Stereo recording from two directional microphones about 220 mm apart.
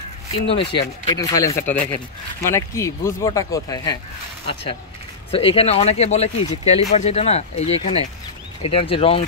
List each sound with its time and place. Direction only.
0.6 s speech: 25° left (ahead or behind)
5.3 s speech: 25° left (ahead or behind)